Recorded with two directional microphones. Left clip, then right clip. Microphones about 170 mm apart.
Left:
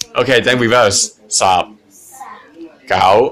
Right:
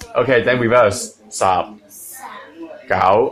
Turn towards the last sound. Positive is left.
turn(degrees=20)  # may be behind; listen again after turning